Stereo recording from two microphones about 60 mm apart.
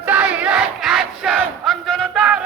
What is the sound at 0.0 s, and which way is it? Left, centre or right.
Crowd, right.